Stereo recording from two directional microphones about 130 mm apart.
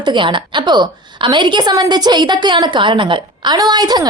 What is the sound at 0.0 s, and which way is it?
A woman's voice, 35° right (ahead or behind).